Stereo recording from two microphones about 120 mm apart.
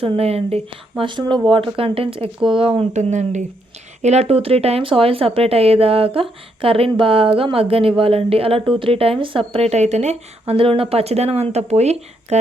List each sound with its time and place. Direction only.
0.0 s speech: 55° right (ahead or behind)
1.0 s a woman's voice: 40° right (ahead or behind)
2.9 s speech: 80° right
4.0 s a woman's voice: 65° right (ahead or behind)